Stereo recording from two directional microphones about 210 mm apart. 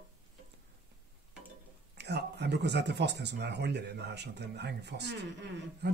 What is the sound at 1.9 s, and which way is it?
Speech, 55° right (ahead or behind).